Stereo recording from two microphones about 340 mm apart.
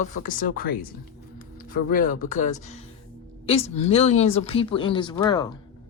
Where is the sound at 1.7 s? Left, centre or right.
Left.